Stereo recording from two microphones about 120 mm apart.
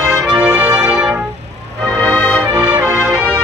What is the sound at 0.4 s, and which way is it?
Music, 15° right (ahead or behind).